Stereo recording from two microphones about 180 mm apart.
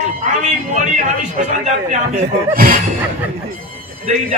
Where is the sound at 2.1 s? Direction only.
45° right (ahead or behind).